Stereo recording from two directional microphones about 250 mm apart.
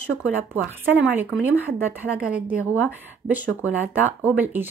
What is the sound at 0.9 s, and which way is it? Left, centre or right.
A woman's voice, centre.